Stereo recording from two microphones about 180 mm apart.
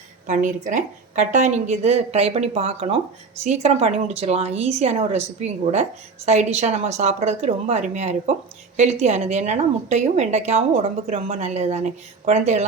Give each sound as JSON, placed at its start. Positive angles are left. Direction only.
{"t": 0.3, "sound": "a woman's voice", "side_deg": -45}